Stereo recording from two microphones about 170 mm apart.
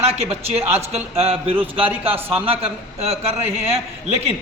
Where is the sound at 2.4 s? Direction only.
35° right (ahead or behind).